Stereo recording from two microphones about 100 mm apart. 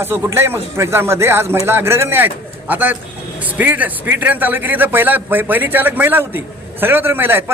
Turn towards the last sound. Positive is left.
turn(degrees=-20)  # may be behind; listen again after turning